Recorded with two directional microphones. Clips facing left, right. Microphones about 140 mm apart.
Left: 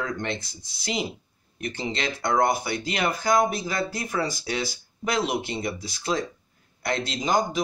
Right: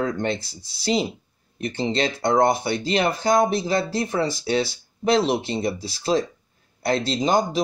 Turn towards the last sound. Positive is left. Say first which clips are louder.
# right 4 dB
turn(degrees=-30)  # may be behind; listen again after turning